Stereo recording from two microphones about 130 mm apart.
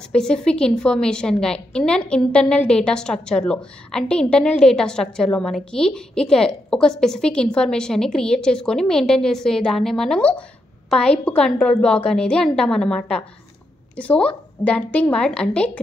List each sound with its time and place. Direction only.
0.1 s a woman's voice: 5° left (ahead or behind)